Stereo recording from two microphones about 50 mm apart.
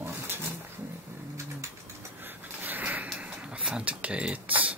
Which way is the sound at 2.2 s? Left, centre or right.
Right.